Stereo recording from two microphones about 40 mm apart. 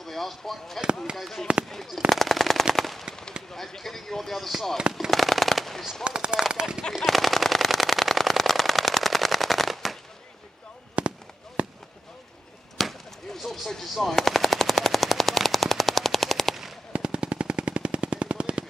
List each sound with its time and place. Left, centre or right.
0.0 s speech: centre
2.7 s machine gun: centre
3.5 s speech: centre
5.1 s machine gun: centre
6.0 s speech: right
6.8 s machine gun: centre
11.0 s fireworks: right
12.7 s machine gun: centre
16.9 s machine gun: right